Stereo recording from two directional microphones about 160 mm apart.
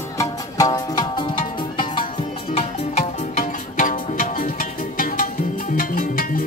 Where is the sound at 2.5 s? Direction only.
45° left (ahead or behind).